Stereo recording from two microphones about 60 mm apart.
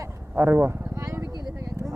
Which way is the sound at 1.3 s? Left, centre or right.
Right.